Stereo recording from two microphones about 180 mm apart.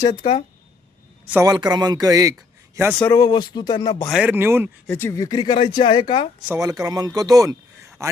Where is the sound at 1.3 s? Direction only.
15° right (ahead or behind).